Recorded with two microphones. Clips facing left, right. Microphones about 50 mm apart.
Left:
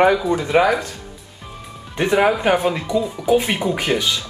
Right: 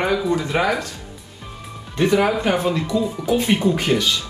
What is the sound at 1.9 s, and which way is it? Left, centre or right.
Speech, left.